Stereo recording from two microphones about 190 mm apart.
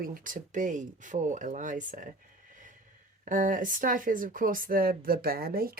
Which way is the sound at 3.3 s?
45° right (ahead or behind).